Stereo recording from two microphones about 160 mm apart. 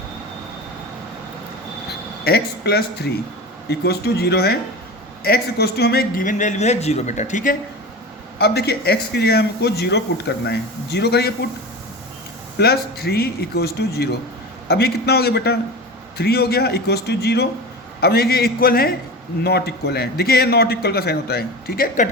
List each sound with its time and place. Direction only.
2.2 s a man's voice: 80° left; by 7.5 s 50° left (ahead or behind)
8.4 s a man's voice: 85° left
12.5 s a man's voice: 80° left
18.0 s a man's voice: 75° left (ahead or behind)
19.5 s a man's voice: 90° left; by 22.1 s 60° left (ahead or behind)